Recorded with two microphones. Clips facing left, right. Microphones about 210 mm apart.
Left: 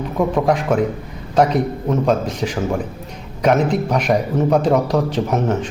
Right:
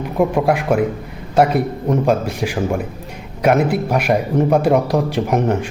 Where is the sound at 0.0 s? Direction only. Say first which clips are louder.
Right 1 dB; 10° right (ahead or behind).